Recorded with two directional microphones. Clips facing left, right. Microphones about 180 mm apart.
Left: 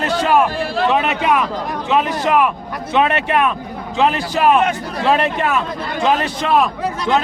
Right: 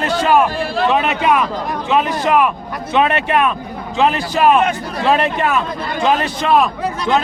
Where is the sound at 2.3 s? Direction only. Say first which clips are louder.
Right 1 dB; 15° right (ahead or behind); by 4.4 s centre (ahead or behind).